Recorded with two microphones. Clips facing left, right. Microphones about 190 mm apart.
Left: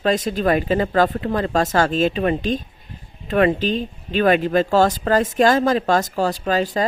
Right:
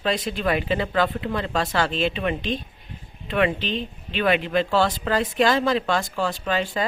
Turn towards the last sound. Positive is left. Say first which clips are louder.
# left 5 dB
turn(degrees=40)  # may be behind; listen again after turning